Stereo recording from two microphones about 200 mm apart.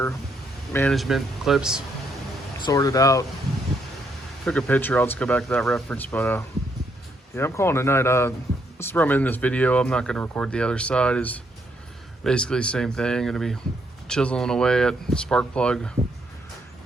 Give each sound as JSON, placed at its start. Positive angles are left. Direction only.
{"t": 0.7, "sound": "speech", "side_deg": 10}
{"t": 0.9, "sound": "speech", "side_deg": 0}
{"t": 2.6, "sound": "speech", "side_deg": 20}
{"t": 4.4, "sound": "speech", "side_deg": 5}